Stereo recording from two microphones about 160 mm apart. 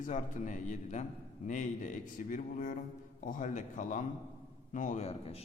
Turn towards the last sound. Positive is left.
turn(degrees=40)  # may be behind; listen again after turning